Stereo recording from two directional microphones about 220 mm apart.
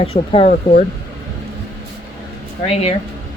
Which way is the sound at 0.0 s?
25° left (ahead or behind).